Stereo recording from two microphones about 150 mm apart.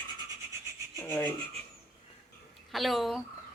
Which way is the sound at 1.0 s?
10° left (ahead or behind).